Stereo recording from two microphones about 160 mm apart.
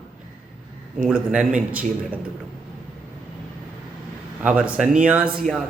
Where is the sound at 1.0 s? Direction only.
5° right (ahead or behind).